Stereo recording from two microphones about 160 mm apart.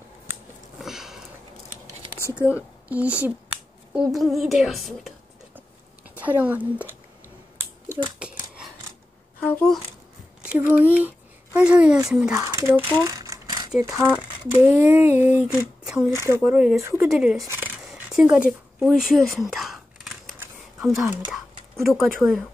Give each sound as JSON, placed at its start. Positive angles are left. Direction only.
{"t": 0.7, "sound": "sniff", "side_deg": 0}
{"t": 2.9, "sound": "a woman's voice", "side_deg": -10}
{"t": 6.0, "sound": "a woman's voice", "side_deg": -10}
{"t": 8.2, "sound": "a sound", "side_deg": -5}
{"t": 9.4, "sound": "speech", "side_deg": 5}
{"t": 10.4, "sound": "speech", "side_deg": -10}
{"t": 12.1, "sound": "a sound", "side_deg": -5}
{"t": 12.4, "sound": "speech", "side_deg": -15}
{"t": 14.0, "sound": "speech", "side_deg": -10}
{"t": 14.9, "sound": "a sound", "side_deg": -10}
{"t": 17.1, "sound": "a woman's voice", "side_deg": -5}
{"t": 17.5, "sound": "a sound", "side_deg": -10}
{"t": 20.8, "sound": "a woman's voice", "side_deg": 0}